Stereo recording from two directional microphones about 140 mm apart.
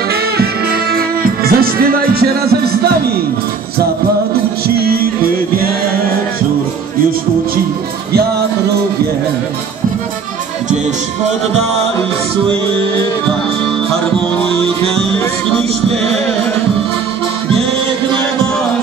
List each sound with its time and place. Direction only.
0.9 s music: 90° right